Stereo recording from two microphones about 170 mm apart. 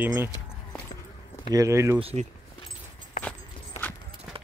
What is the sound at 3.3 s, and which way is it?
Walk, 10° left (ahead or behind).